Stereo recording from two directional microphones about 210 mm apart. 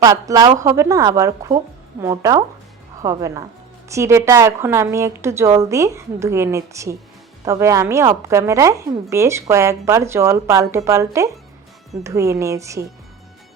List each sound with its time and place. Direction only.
0.0 s a woman's voice: 15° right (ahead or behind)